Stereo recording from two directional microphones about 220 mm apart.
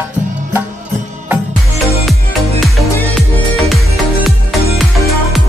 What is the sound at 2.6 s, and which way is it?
Music, centre (ahead or behind).